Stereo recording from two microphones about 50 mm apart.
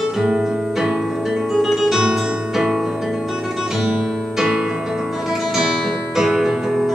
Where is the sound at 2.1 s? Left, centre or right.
Centre.